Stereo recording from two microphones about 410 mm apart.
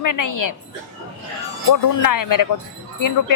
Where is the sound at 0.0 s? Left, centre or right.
Left.